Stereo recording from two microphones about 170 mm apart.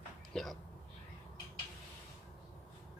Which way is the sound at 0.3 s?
5° left (ahead or behind).